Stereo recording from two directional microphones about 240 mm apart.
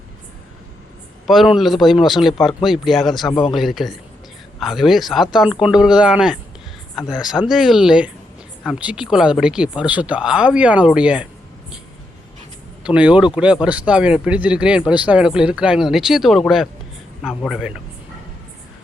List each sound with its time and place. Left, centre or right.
1.3 s speech: centre
3.2 s speech: centre
3.5 s speech: centre
12.8 s speech: centre